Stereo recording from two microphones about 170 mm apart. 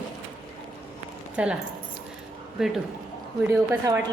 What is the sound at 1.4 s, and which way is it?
Speech, 10° right (ahead or behind).